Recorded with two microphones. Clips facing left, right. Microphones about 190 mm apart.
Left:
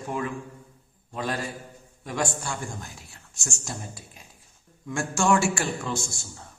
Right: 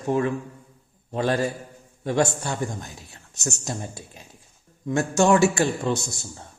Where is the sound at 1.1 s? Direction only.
25° right (ahead or behind).